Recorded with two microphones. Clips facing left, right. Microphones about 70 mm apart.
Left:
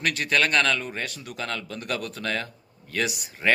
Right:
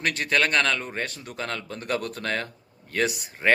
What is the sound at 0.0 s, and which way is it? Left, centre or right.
Speech, right.